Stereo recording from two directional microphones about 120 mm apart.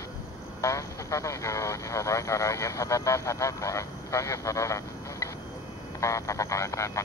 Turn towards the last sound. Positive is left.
turn(degrees=25)  # may be behind; listen again after turning